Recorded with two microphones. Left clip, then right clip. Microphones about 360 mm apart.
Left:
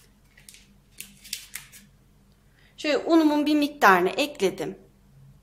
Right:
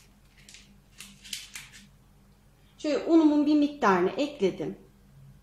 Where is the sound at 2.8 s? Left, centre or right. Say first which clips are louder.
Left 2 dB; left.